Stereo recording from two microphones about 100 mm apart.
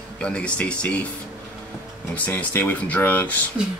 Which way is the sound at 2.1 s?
20° left (ahead or behind).